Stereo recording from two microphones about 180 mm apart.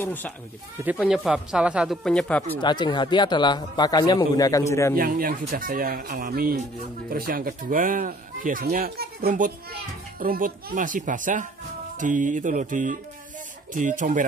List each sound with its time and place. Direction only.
0.0 s speech: 10° left (ahead or behind)
0.7 s speech: 5° right (ahead or behind); by 2.6 s 10° left (ahead or behind)
2.6 s speech: 25° left (ahead or behind)
4.9 s speech: 55° right (ahead or behind)